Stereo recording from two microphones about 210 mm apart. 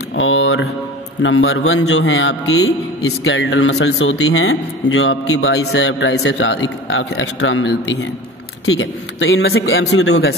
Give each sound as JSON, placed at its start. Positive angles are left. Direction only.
{"t": 0.1, "sound": "mantra", "side_deg": 65}
{"t": 1.2, "sound": "a man's voice", "side_deg": 75}